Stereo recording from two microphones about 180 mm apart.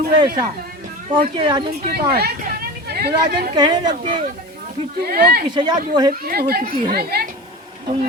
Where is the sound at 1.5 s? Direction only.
25° right (ahead or behind).